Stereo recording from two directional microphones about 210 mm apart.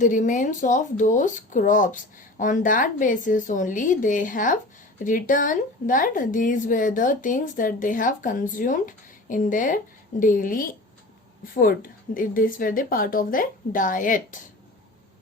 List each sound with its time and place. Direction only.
0.0 s a woman's voice: 40° left (ahead or behind)